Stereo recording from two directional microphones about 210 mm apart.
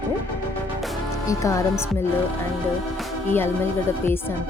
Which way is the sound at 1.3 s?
15° left (ahead or behind).